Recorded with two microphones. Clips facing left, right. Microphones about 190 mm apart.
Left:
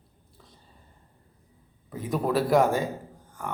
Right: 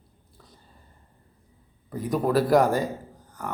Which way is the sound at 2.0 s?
Centre (ahead or behind).